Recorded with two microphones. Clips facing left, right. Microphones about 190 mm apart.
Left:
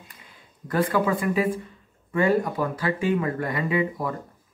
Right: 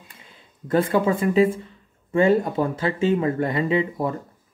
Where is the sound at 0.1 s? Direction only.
25° right (ahead or behind).